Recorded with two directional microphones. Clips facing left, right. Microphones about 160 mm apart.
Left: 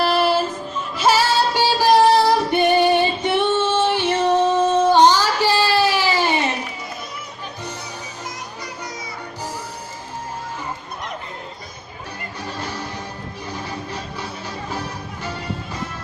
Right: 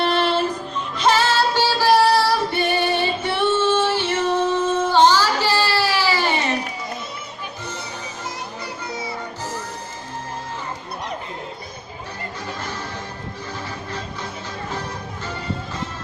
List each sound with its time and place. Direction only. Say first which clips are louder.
0.0 s music: left 1 dB; 5° left (ahead or behind)
12.5 s music: left 1 dB; 15° left (ahead or behind)